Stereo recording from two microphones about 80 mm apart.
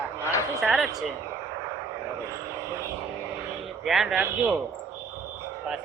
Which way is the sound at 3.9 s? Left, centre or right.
Centre.